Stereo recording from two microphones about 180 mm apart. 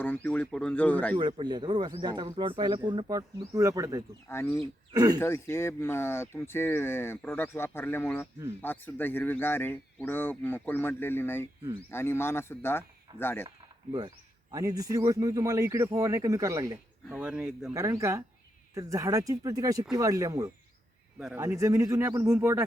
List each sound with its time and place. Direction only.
0.0 s speech: 10° left (ahead or behind)
1.1 s speech: 25° right (ahead or behind)
4.5 s speech: 30° right (ahead or behind)
5.2 s speech: 15° left (ahead or behind)
14.5 s speech: 20° right (ahead or behind)
17.1 s speech: 5° right (ahead or behind)
17.7 s speech: 15° right (ahead or behind)